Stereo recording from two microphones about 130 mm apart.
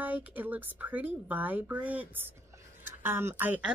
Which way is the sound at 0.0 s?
10° right (ahead or behind).